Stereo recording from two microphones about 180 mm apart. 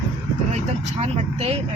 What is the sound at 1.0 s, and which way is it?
Speech, 35° right (ahead or behind).